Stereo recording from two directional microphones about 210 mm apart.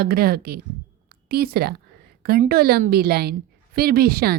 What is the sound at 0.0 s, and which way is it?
A woman's voice, 45° right (ahead or behind).